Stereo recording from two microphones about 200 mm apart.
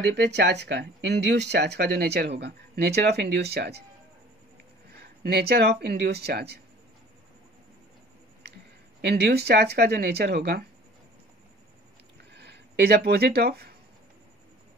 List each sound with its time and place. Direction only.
0.1 s speech: 60° right (ahead or behind)
4.9 s speech: 55° right (ahead or behind)
9.0 s speech: 55° right (ahead or behind)
12.3 s speech: 60° right (ahead or behind)